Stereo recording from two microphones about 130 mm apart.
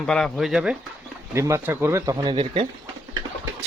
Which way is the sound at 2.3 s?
40° right (ahead or behind).